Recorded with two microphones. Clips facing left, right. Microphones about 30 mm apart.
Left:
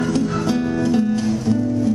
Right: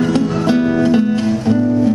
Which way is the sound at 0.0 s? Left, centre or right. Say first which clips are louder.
Right 5 dB; right.